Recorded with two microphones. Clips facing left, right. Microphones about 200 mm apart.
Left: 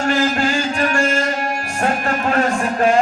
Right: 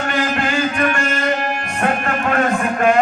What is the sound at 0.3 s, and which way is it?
Music, 30° left (ahead or behind).